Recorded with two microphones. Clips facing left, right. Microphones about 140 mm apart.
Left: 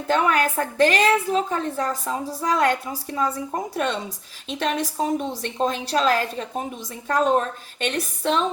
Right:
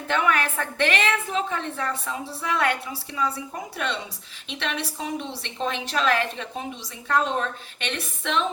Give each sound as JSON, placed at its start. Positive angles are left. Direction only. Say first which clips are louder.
{"t": 0.1, "sound": "a woman's voice", "louder": "left 3 dB", "side_deg": 35}